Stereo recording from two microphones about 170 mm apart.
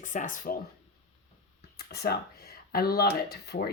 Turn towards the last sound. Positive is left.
turn(degrees=70)  # may be behind; listen again after turning